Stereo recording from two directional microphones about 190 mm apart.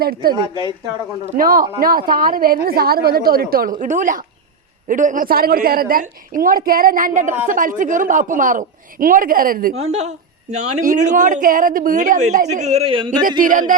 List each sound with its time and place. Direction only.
0.0 s a woman's voice: 50° right (ahead or behind)
9.7 s a woman's voice: 35° right (ahead or behind)
13.4 s a woman's voice: 45° right (ahead or behind)